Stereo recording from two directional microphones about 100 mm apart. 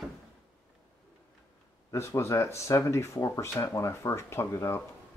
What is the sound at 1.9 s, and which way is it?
Speech, 25° left (ahead or behind).